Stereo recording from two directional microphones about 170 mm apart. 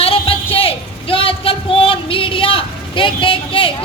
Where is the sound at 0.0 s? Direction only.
35° left (ahead or behind).